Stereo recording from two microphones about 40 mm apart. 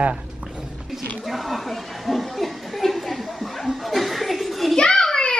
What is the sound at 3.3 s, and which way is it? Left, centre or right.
Children playing, centre.